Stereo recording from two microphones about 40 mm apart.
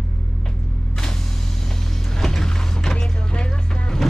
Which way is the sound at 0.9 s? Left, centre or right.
Centre.